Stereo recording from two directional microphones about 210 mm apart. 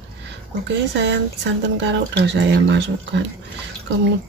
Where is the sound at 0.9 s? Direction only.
55° right (ahead or behind).